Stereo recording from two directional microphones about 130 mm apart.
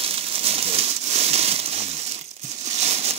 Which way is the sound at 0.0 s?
50° right (ahead or behind).